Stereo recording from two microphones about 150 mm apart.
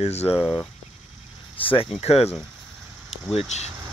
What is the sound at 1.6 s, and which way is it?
Speech, 35° left (ahead or behind).